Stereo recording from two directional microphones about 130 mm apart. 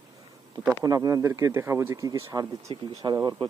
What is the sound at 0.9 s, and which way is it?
Speech, 25° right (ahead or behind).